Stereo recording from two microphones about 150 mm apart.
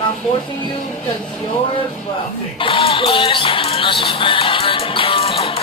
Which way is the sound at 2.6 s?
35° left (ahead or behind).